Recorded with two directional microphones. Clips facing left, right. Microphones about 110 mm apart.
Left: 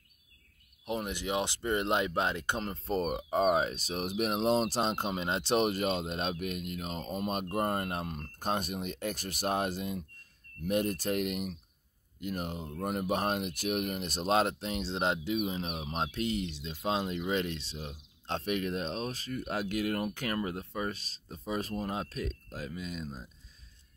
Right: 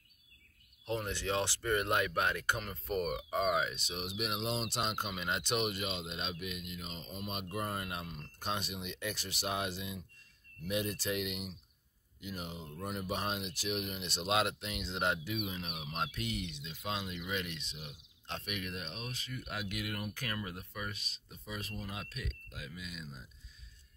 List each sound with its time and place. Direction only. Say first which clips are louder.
0.8 s speech: left 2 dB; 15° left (ahead or behind); by 23.2 s 40° left (ahead or behind)